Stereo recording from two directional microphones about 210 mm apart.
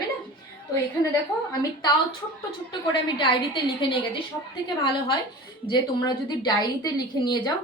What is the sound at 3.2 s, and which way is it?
Speech, 25° left (ahead or behind).